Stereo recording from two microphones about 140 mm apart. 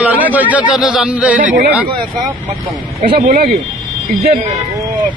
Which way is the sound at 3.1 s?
90° right.